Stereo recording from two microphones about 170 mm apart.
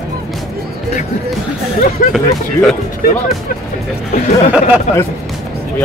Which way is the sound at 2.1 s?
5° left (ahead or behind).